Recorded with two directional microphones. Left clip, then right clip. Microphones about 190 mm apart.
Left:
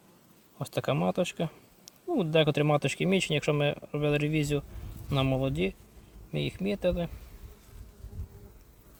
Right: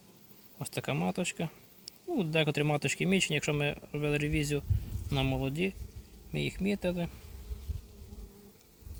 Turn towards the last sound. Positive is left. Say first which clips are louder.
# left 4 dB
turn(degrees=35)  # may be behind; listen again after turning